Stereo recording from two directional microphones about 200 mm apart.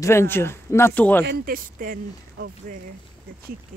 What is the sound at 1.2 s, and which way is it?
Speech, 50° right (ahead or behind).